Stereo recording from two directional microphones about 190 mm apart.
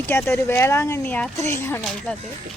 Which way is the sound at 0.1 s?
10° left (ahead or behind).